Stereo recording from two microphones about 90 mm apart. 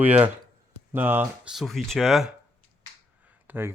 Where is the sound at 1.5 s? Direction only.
Centre (ahead or behind).